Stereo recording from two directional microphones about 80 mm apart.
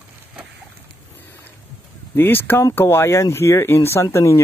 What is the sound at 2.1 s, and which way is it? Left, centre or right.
Speech, left.